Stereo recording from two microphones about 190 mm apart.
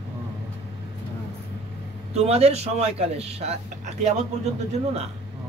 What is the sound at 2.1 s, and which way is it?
Speech, 35° right (ahead or behind).